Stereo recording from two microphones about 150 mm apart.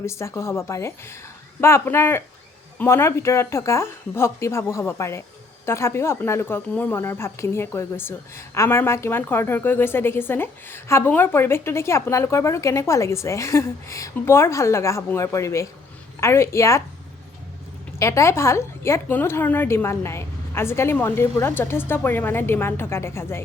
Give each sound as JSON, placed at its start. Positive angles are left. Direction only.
{"t": 0.0, "sound": "speech", "side_deg": 20}
{"t": 18.0, "sound": "speech", "side_deg": 20}